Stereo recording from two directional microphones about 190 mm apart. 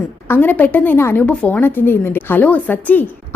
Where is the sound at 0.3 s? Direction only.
10° left (ahead or behind).